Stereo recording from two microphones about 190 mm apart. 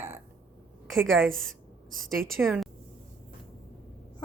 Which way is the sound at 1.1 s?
Centre (ahead or behind).